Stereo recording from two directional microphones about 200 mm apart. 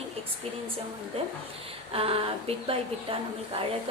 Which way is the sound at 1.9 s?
30° right (ahead or behind).